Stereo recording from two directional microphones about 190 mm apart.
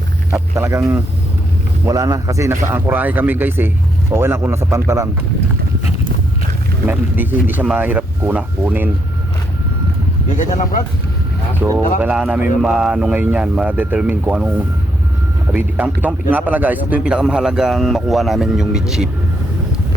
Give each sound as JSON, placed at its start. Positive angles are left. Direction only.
{"t": 0.5, "sound": "speech", "side_deg": -15}
{"t": 6.8, "sound": "speech", "side_deg": -10}
{"t": 10.2, "sound": "speech", "side_deg": 40}
{"t": 11.6, "sound": "a man's voice", "side_deg": -5}